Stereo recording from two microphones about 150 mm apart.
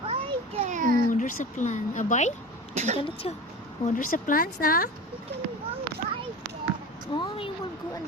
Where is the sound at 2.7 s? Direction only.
50° right (ahead or behind).